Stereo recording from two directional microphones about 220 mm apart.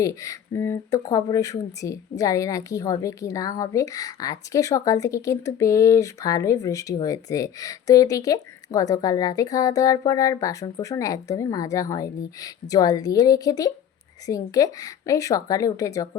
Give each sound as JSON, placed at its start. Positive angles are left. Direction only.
{"t": 0.0, "sound": "speech", "side_deg": 15}